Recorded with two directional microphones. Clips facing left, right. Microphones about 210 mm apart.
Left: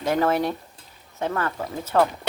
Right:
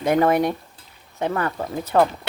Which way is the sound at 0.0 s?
15° right (ahead or behind).